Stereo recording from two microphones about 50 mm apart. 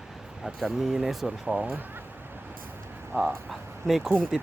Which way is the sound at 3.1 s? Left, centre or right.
Right.